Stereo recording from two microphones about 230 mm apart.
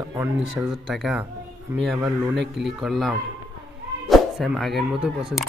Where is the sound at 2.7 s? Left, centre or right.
Centre.